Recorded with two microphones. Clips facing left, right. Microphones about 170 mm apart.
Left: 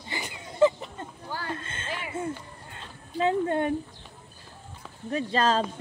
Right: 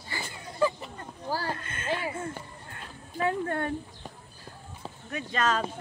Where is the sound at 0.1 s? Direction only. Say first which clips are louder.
Left 2 dB; 20° left (ahead or behind).